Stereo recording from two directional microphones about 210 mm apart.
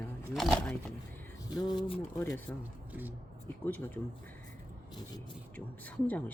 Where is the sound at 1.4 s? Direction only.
20° left (ahead or behind).